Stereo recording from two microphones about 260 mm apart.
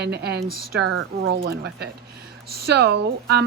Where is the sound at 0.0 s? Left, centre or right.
Right.